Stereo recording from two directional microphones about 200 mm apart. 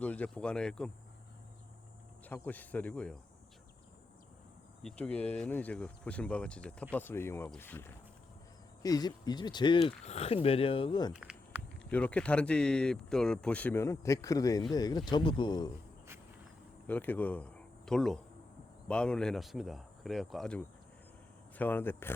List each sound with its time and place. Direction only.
0.0 s speech: 5° left (ahead or behind)
2.2 s speech: 10° left (ahead or behind)
4.8 s speech: 5° left (ahead or behind); by 11.1 s 25° left (ahead or behind)
11.1 s a sound: 5° right (ahead or behind)
11.9 s speech: 5° left (ahead or behind)
16.8 s speech: 10° left (ahead or behind)